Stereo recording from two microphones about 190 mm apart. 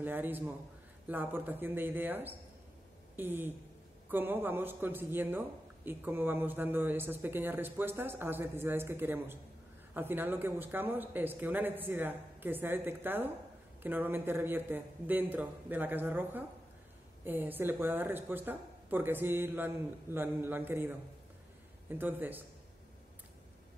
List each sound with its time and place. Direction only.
0.0 s speech: 10° right (ahead or behind)